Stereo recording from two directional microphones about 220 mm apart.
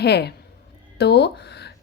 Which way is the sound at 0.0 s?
50° left (ahead or behind).